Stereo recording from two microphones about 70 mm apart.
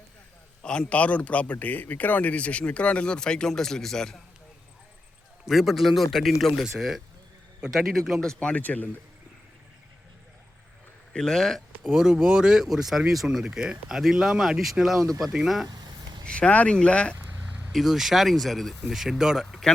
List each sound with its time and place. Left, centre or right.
0.6 s a man's voice: centre
5.5 s a man's voice: centre; by 8.9 s left
11.1 s speech: centre
15.6 s a sound: right
16.2 s a man's voice: centre
17.7 s speech: centre